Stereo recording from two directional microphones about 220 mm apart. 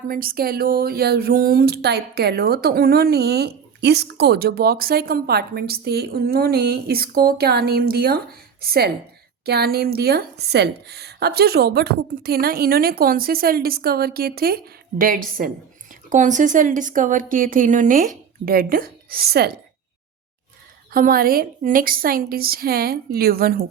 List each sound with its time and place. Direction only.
0.1 s a woman's voice: 40° right (ahead or behind)
20.9 s speech: 40° right (ahead or behind)